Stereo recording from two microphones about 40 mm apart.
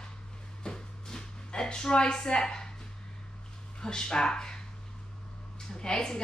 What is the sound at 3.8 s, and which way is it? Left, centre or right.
Speech, centre.